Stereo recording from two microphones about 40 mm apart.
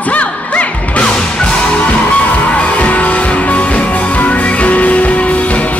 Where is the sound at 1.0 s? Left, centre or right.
Left.